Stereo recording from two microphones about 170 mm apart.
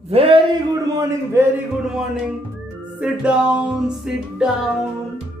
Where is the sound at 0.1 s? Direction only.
35° right (ahead or behind).